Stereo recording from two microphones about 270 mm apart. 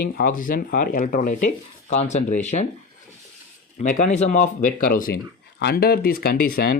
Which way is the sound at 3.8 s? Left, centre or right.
Left.